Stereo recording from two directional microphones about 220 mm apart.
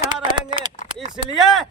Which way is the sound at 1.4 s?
Centre (ahead or behind).